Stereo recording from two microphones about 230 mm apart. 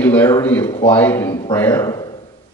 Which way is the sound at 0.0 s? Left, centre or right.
Centre.